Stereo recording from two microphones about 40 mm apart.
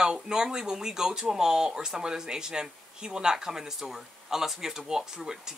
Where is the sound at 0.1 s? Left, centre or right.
Centre.